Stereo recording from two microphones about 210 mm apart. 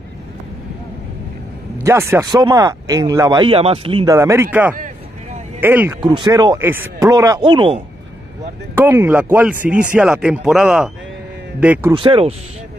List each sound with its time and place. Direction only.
1.8 s speech: 10° right (ahead or behind)
8.7 s speech: 10° right (ahead or behind)
11.9 s speech: 25° right (ahead or behind)